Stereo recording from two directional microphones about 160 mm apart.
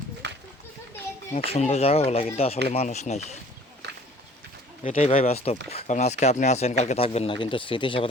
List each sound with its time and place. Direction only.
0.2 s children playing: 90° right
1.5 s speech: 40° left (ahead or behind)
3.8 s a sound: 90° right
4.8 s speech: 45° left (ahead or behind)